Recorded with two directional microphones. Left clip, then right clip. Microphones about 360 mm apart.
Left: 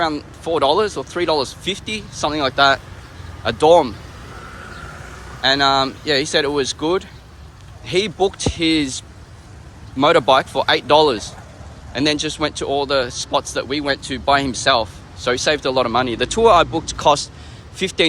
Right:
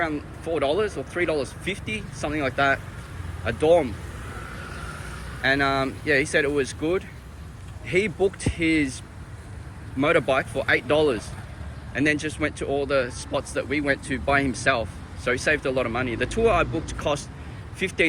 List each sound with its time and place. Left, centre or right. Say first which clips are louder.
0.0 s speech: left 7 dB; centre
5.4 s speech: left 7 dB; centre